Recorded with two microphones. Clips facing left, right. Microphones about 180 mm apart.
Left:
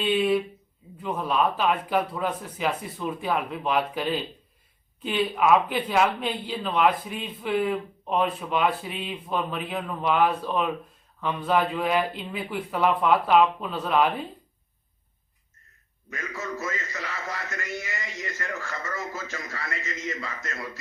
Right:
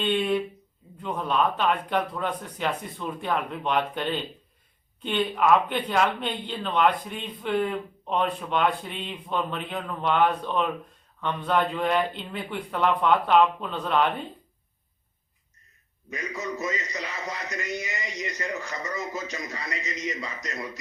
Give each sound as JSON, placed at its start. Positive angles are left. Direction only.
{"t": 0.0, "sound": "speech", "side_deg": 5}
{"t": 16.0, "sound": "a man's voice", "side_deg": -15}